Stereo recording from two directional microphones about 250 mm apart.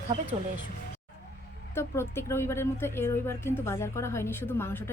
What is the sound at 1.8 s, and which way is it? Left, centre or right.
A woman's voice, centre.